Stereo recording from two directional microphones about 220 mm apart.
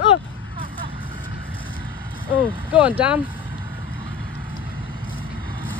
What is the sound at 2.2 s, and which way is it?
Speech, 10° left (ahead or behind).